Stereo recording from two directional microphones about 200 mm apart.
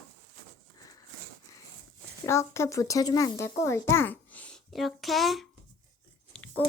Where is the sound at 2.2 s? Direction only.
15° left (ahead or behind).